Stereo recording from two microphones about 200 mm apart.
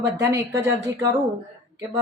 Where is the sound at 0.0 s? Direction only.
60° right (ahead or behind).